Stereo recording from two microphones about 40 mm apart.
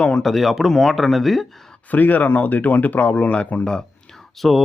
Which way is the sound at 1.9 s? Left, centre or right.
Left.